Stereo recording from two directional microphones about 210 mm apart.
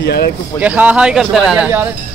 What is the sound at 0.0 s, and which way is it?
Speech, 50° left (ahead or behind).